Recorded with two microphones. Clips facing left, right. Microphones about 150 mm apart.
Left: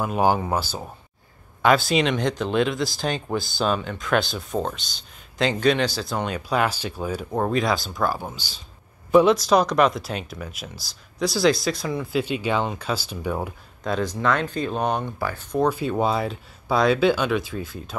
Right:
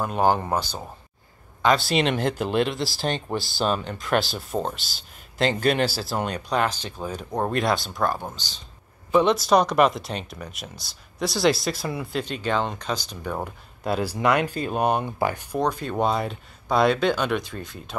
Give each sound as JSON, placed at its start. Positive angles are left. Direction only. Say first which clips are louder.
{"t": 0.0, "sound": "speech", "louder": "left 1 dB", "side_deg": 5}
{"t": 12.2, "sound": "speech", "louder": "left 2 dB", "side_deg": 10}
{"t": 13.8, "sound": "speech", "louder": "right 1 dB", "side_deg": -10}
{"t": 15.1, "sound": "speech", "louder": "right 4 dB", "side_deg": -20}
{"t": 15.6, "sound": "speech", "louder": "left 2 dB", "side_deg": 5}